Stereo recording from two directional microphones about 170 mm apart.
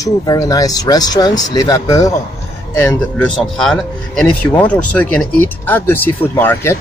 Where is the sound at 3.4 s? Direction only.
Centre (ahead or behind).